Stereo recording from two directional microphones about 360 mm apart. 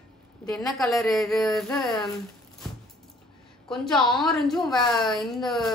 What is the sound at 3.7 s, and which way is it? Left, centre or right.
A woman's voice, centre.